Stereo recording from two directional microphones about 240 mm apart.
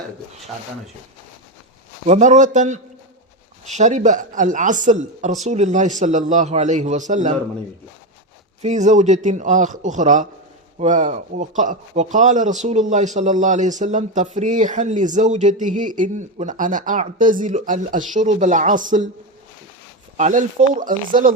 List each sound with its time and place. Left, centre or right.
2.0 s a man's voice: right
8.6 s a man's voice: right
20.1 s speech: right